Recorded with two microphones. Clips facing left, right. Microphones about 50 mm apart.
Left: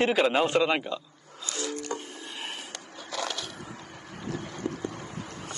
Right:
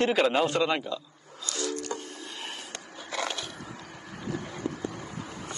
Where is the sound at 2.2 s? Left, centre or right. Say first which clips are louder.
Left 1 dB; centre.